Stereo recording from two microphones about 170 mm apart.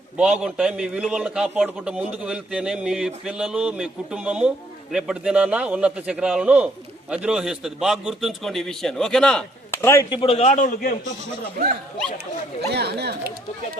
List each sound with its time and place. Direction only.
0.2 s a man's voice: 5° right (ahead or behind); by 10.1 s 15° left (ahead or behind)
10.1 s a man's voice: 35° left (ahead or behind); by 10.9 s 50° left (ahead or behind)
12.6 s speech: 75° right (ahead or behind)